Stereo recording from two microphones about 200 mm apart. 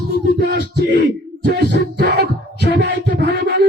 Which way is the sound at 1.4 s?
60° right (ahead or behind).